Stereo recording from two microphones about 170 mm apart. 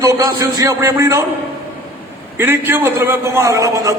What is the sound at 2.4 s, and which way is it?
A man's voice, 15° right (ahead or behind).